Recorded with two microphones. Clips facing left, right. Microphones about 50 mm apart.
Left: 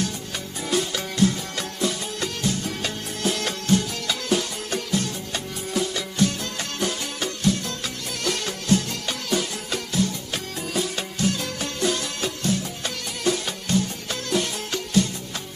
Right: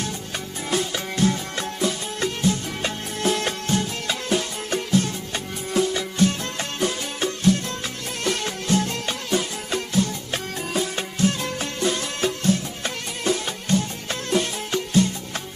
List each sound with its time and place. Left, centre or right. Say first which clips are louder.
0.7 s music: even; right